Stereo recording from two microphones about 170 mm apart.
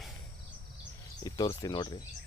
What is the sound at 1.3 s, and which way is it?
Speech, 20° left (ahead or behind).